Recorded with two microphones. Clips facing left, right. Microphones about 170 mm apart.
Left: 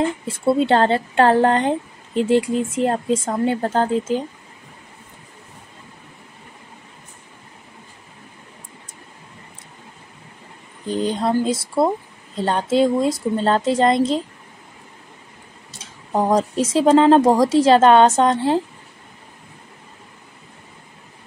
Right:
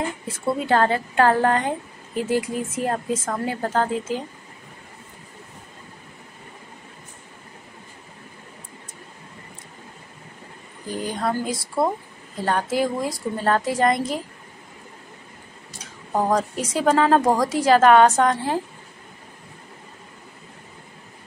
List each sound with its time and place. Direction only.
0.3 s speech: 30° left (ahead or behind)
10.9 s speech: 25° left (ahead or behind)
15.8 s speech: 25° left (ahead or behind)